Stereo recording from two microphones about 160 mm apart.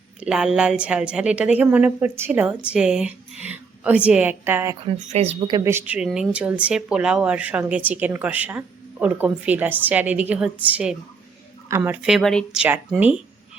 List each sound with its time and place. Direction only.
0.2 s a woman's voice: 5° right (ahead or behind)
4.9 s speech: 40° right (ahead or behind)
5.5 s a woman's voice: 20° right (ahead or behind); by 12.6 s 5° left (ahead or behind)
12.6 s a woman's voice: 10° right (ahead or behind)